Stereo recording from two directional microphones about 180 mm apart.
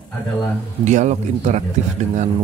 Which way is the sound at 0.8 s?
40° right (ahead or behind).